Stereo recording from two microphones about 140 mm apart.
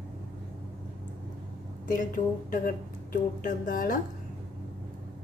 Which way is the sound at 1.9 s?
75° left (ahead or behind).